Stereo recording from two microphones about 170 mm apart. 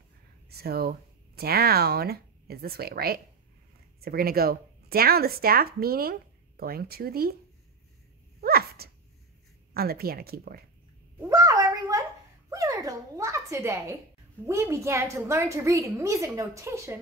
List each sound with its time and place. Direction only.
0.5 s speech: 65° right (ahead or behind)
8.4 s dog: 65° right (ahead or behind)
9.8 s speech: 65° right (ahead or behind)
11.1 s a sound: 20° right (ahead or behind)
14.4 s a woman's voice: 15° right (ahead or behind)